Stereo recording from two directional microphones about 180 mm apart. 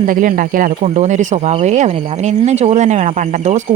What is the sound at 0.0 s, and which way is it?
Speech, 50° right (ahead or behind).